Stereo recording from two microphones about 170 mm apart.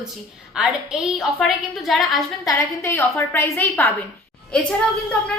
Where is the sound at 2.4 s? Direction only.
15° left (ahead or behind).